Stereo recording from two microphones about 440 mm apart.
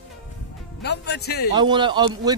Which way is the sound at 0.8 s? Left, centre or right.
Left.